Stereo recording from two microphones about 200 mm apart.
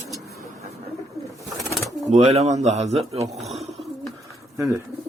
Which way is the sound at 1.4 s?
Centre (ahead or behind).